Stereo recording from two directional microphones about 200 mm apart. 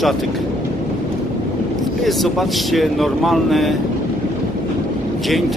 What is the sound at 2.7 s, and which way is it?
Speech, centre (ahead or behind).